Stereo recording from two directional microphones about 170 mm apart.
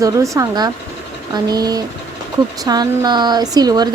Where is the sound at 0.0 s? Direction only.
20° right (ahead or behind).